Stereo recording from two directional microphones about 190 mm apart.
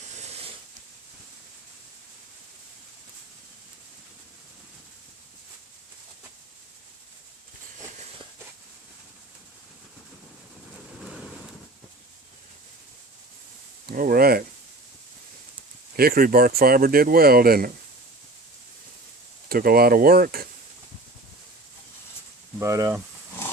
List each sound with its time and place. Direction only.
13.8 s speech: 50° right (ahead or behind)
16.0 s speech: 50° right (ahead or behind)
19.5 s speech: 50° right (ahead or behind)
22.6 s speech: 15° right (ahead or behind)